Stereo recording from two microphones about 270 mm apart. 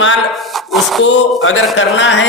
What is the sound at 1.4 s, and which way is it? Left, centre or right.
Speech, left.